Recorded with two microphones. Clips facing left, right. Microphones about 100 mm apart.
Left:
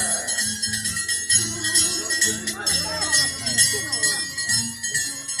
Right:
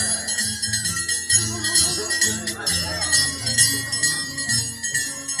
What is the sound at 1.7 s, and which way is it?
Music, 5° right (ahead or behind).